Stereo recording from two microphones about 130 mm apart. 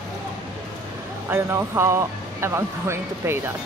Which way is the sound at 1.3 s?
20° right (ahead or behind).